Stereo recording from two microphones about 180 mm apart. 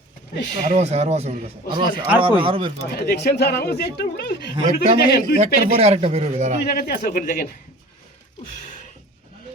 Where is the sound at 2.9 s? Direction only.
60° left (ahead or behind).